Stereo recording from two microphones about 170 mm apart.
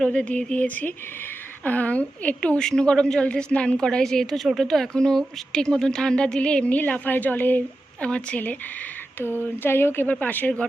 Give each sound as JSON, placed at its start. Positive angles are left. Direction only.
{"t": 0.0, "sound": "a woman's voice", "side_deg": 5}